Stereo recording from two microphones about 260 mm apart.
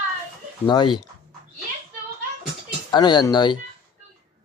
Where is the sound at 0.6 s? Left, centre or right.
Centre.